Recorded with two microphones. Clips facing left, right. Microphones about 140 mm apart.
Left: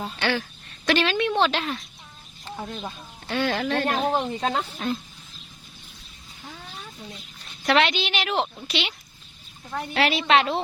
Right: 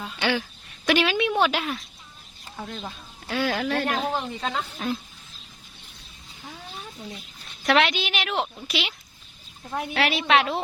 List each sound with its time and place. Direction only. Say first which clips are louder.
0.2 s speech: right 2 dB; 15° right (ahead or behind)
2.6 s speech: left 1 dB; 10° left (ahead or behind)
3.2 s a woman's voice: left 1 dB; centre (ahead or behind)
4.2 s speech: left 4 dB; 35° left (ahead or behind)
4.8 s a woman's voice: right 1 dB; 5° right (ahead or behind)
7.4 s a woman's voice: even; centre (ahead or behind)